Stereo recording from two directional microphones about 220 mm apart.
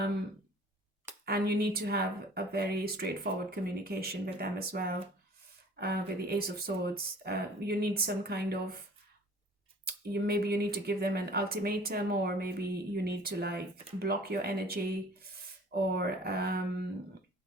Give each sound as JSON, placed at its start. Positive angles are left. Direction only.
{"t": 1.2, "sound": "a woman's voice", "side_deg": -45}
{"t": 9.8, "sound": "a woman's voice", "side_deg": -45}